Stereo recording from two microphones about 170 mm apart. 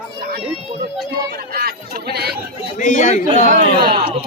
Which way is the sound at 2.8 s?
45° left (ahead or behind).